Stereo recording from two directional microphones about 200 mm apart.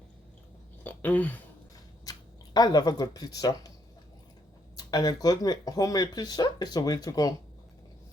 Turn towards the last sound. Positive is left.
turn(degrees=20)  # may be behind; listen again after turning